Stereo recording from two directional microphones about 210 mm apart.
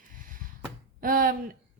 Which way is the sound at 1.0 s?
40° right (ahead or behind).